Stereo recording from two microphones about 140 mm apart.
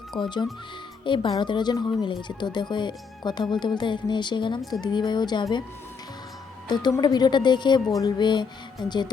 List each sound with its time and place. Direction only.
0.2 s speech: 35° left (ahead or behind)
7.0 s speech: 30° left (ahead or behind)